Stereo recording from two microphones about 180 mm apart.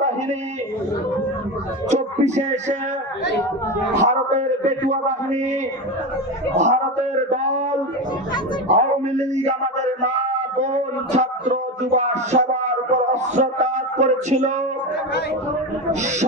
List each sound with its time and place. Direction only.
1.9 s a man's voice: 40° right (ahead or behind)
3.9 s a man's voice: 40° right (ahead or behind)
6.6 s a man's voice: 40° right (ahead or behind)
8.7 s speech: 40° right (ahead or behind)
15.9 s a man's voice: 40° right (ahead or behind)